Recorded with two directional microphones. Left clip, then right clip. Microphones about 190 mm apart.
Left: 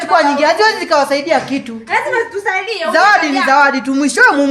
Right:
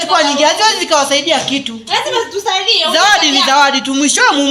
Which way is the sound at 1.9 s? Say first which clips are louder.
Even; 5° left (ahead or behind).